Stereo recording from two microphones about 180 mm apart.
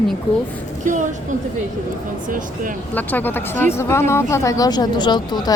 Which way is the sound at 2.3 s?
45° right (ahead or behind).